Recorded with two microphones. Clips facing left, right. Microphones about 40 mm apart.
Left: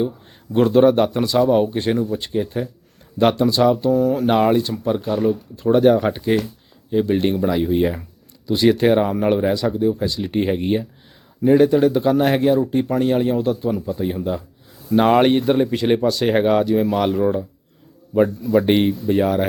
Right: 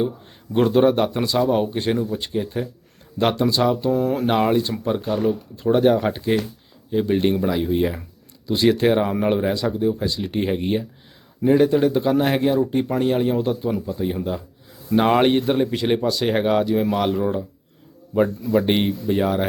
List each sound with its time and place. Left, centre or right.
0.5 s speech: centre
3.9 s speech: right
4.3 s speech: centre
13.8 s speech: centre